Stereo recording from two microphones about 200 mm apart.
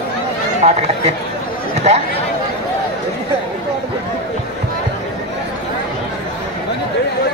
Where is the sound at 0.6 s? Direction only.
35° right (ahead or behind).